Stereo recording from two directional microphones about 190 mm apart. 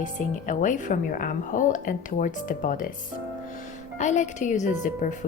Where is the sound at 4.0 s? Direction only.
40° left (ahead or behind).